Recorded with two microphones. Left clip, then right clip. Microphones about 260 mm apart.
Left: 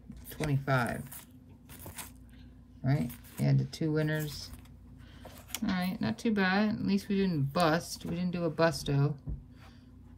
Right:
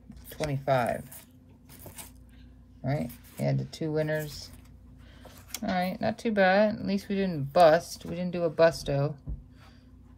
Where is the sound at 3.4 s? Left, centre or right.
Centre.